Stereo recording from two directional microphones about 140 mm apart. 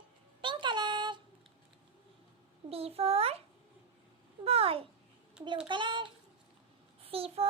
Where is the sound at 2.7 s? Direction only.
45° right (ahead or behind).